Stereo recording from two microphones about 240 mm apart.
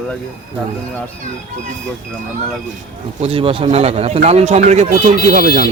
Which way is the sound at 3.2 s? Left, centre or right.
Right.